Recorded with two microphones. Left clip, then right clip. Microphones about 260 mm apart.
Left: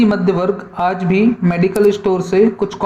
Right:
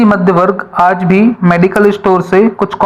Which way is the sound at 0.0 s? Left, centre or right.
Centre.